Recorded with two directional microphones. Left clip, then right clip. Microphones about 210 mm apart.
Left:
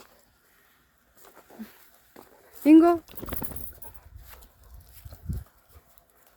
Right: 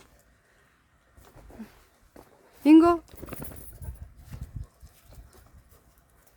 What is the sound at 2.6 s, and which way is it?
Speech, 5° right (ahead or behind).